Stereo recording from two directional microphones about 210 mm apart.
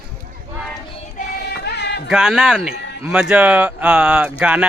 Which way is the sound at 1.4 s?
50° left (ahead or behind).